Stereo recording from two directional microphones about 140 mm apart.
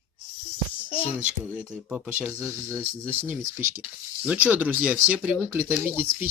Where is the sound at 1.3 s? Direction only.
10° right (ahead or behind).